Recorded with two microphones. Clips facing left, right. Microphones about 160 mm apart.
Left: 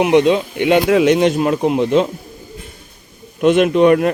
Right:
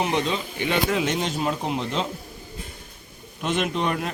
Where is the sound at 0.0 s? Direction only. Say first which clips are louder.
Left 12 dB; 70° left (ahead or behind).